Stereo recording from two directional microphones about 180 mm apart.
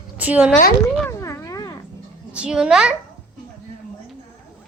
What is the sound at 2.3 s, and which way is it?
Speech, 5° right (ahead or behind).